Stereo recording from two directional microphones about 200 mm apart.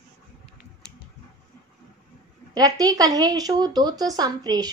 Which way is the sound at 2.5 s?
20° right (ahead or behind).